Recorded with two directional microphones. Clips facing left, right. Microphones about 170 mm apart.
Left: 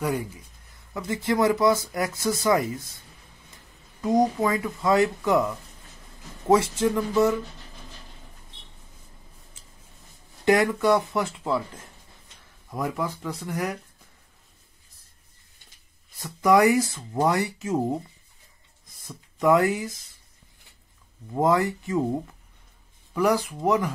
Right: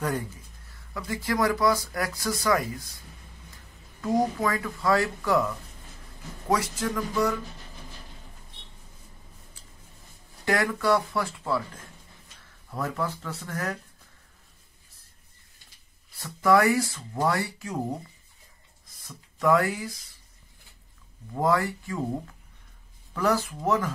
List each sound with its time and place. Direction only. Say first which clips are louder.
0.0 s speech: left 2 dB; 10° left (ahead or behind)
0.9 s speech: left 3 dB; 25° left (ahead or behind)
4.0 s speech: left 3 dB; 20° left (ahead or behind)
10.4 s speech: left 5 dB; 20° left (ahead or behind)
16.2 s speech: left 2 dB; 15° left (ahead or behind)
19.0 s speech: left 2 dB; 20° left (ahead or behind)
21.4 s speech: left 3 dB; 20° left (ahead or behind)
23.1 s speech: left 3 dB; 15° left (ahead or behind)